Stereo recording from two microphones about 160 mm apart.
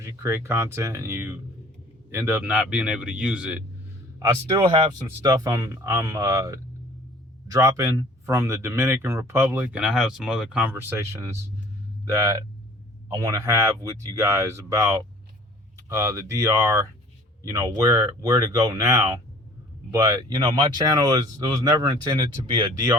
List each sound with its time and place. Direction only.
0.0 s speech: 20° right (ahead or behind)
4.2 s speech: 30° right (ahead or behind); by 10.7 s 5° right (ahead or behind)
10.8 s speech: 15° right (ahead or behind)